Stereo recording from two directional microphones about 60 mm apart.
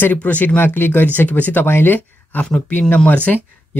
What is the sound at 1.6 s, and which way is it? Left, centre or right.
Speech, left.